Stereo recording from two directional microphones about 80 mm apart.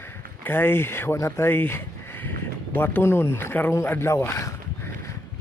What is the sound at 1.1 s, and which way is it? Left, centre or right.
Speech, left.